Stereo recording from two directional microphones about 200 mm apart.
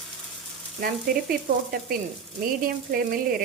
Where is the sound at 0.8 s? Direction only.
45° right (ahead or behind).